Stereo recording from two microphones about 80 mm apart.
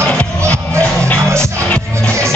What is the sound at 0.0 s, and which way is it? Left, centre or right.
Music, centre.